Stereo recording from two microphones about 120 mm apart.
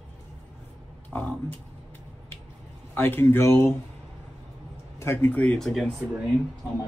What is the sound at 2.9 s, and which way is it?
Speech, 20° left (ahead or behind).